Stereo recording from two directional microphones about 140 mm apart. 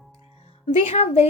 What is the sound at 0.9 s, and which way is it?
Speech, 45° left (ahead or behind).